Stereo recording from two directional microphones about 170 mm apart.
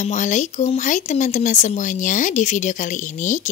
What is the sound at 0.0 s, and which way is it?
A woman's voice, 45° left (ahead or behind).